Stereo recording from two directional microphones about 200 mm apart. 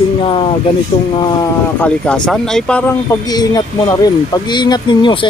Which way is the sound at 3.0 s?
20° left (ahead or behind).